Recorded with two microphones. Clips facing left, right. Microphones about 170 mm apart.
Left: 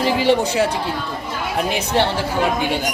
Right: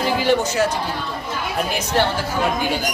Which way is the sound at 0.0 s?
25° left (ahead or behind).